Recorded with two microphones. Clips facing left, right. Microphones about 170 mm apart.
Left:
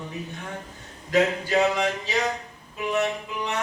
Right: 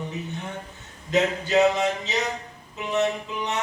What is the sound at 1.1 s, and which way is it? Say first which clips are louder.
Mantra: even; 20° right (ahead or behind).